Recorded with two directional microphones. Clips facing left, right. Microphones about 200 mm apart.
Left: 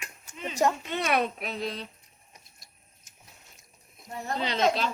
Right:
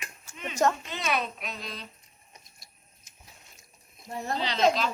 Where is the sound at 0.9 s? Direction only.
60° left (ahead or behind).